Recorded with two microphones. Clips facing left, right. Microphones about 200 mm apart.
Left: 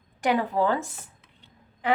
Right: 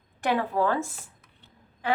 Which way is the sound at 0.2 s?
15° left (ahead or behind).